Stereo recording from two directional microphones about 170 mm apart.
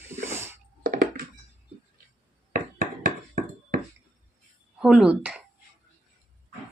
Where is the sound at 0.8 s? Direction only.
60° right (ahead or behind).